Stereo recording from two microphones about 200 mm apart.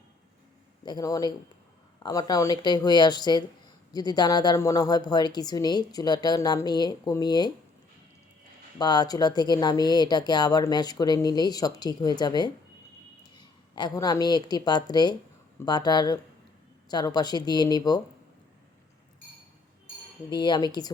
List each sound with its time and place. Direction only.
0.9 s speech: 20° left (ahead or behind)
8.8 s a woman's voice: 20° left (ahead or behind)
20.3 s speech: 20° left (ahead or behind)